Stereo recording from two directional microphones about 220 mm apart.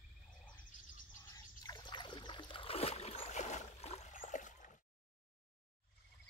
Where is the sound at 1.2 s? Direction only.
15° left (ahead or behind); by 4.7 s 35° left (ahead or behind).